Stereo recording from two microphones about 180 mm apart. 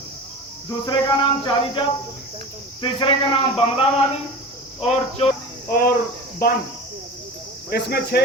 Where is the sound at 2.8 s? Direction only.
30° left (ahead or behind).